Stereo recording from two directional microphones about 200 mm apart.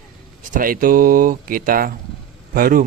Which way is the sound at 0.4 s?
45° right (ahead or behind).